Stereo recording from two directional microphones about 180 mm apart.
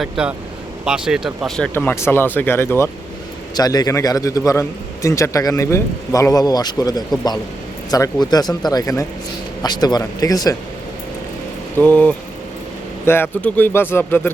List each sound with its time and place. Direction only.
0.0 s a man's voice: 5° right (ahead or behind); by 10.6 s 20° left (ahead or behind)
11.8 s speech: 5° left (ahead or behind)